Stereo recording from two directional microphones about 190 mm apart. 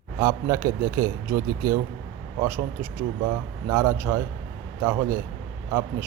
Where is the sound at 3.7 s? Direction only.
15° right (ahead or behind).